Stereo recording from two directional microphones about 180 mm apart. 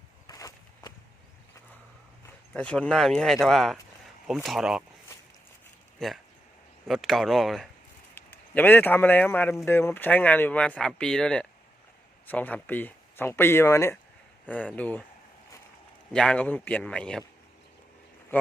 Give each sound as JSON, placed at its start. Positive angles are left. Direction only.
{"t": 0.3, "sound": "a sound", "side_deg": 20}
{"t": 2.5, "sound": "speech", "side_deg": 5}
{"t": 6.0, "sound": "a man's voice", "side_deg": 5}
{"t": 16.1, "sound": "a man's voice", "side_deg": 5}